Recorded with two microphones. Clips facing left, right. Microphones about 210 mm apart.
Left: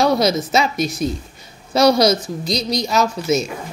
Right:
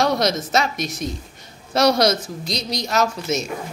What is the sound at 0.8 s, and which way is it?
Speech, 30° left (ahead or behind).